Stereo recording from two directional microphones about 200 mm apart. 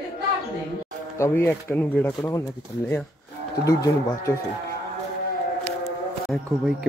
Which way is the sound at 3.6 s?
15° left (ahead or behind).